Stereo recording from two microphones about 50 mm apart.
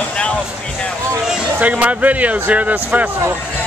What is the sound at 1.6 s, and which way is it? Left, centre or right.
Speech, right.